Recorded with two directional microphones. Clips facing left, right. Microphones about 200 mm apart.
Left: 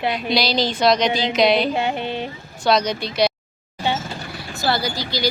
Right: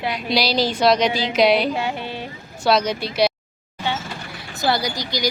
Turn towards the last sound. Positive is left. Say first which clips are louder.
# left 1 dB
turn(degrees=-15)  # may be behind; listen again after turning